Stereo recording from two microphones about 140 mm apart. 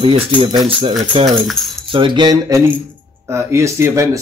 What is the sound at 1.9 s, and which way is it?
Speech, 35° right (ahead or behind).